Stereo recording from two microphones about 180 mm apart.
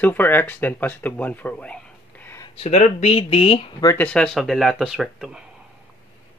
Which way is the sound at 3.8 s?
15° left (ahead or behind).